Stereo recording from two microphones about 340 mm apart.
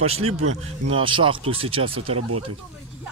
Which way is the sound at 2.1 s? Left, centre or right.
Right.